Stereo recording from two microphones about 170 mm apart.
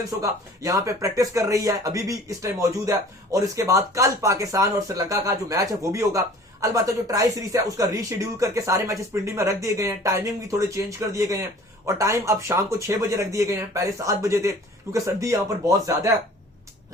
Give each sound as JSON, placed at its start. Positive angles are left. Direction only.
{"t": 0.2, "sound": "speech", "side_deg": -20}